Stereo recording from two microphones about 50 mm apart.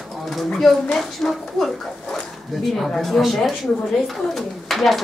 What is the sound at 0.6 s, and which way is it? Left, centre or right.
Speech, centre.